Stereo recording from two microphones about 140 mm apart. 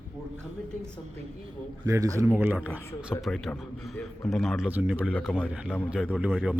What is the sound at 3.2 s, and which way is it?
A man's voice, centre (ahead or behind).